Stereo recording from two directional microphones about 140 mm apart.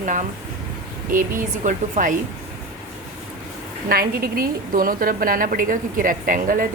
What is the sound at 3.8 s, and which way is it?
A woman's voice, 90° right.